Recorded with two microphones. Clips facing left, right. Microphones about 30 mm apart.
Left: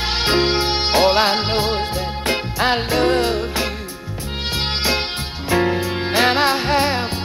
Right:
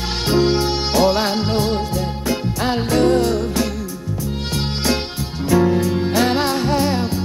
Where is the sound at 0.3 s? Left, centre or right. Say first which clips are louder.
Right 2 dB; left.